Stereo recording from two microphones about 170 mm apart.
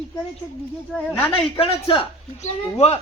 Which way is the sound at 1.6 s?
30° left (ahead or behind).